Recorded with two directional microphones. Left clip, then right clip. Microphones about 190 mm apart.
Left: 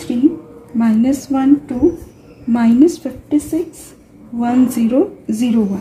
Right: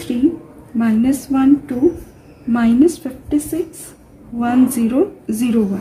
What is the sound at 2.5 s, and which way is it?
A woman's voice, 5° left (ahead or behind).